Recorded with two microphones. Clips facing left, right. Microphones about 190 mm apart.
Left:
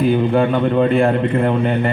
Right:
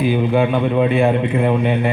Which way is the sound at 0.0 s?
5° right (ahead or behind).